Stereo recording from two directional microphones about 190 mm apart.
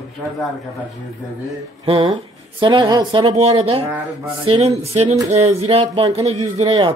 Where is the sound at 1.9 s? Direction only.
30° right (ahead or behind).